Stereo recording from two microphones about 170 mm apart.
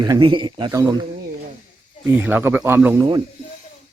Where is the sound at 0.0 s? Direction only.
25° right (ahead or behind).